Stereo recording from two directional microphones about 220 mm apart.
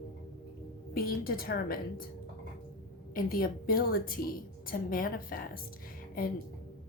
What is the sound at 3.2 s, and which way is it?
A woman's voice, 40° left (ahead or behind).